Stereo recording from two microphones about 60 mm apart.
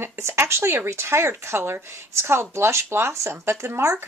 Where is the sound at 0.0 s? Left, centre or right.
Right.